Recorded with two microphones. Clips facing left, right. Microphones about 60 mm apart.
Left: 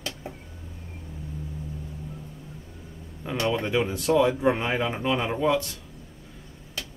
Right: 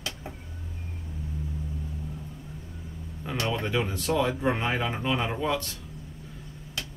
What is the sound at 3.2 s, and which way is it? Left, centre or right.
Speech, centre.